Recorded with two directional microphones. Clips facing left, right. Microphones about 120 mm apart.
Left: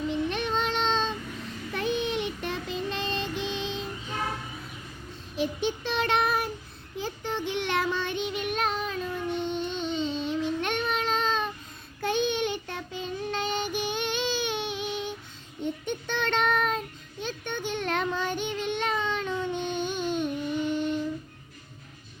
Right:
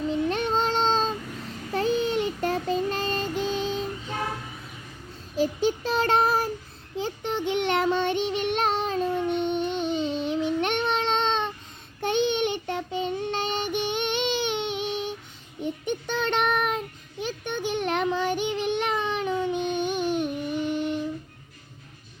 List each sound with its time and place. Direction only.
0.3 s child singing: 40° right (ahead or behind)
5.4 s child singing: 35° right (ahead or behind)
6.9 s child singing: 25° right (ahead or behind)
13.7 s a sound: 20° right (ahead or behind)
15.9 s child singing: 15° right (ahead or behind)